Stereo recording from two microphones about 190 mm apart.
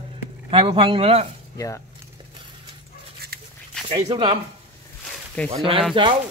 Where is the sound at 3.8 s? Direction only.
30° right (ahead or behind).